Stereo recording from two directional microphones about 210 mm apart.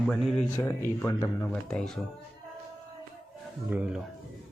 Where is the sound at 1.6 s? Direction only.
5° left (ahead or behind).